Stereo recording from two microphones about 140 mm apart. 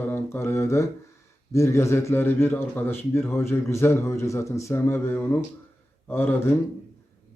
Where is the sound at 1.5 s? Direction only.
20° left (ahead or behind).